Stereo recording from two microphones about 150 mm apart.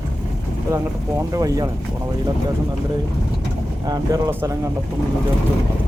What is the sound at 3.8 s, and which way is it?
Speech, 25° right (ahead or behind).